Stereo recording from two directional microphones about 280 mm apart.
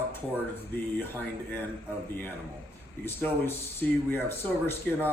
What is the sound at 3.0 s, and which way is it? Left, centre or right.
Speech, centre.